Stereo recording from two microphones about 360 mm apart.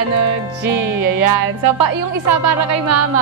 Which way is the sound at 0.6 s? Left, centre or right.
Right.